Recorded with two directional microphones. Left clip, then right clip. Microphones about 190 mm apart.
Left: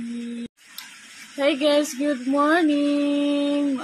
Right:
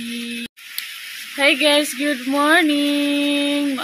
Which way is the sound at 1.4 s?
5° left (ahead or behind).